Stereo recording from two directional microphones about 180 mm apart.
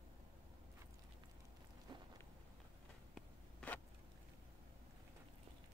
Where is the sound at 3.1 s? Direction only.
5° left (ahead or behind).